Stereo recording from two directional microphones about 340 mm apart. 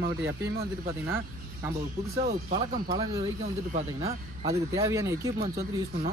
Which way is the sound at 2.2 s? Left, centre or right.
Centre.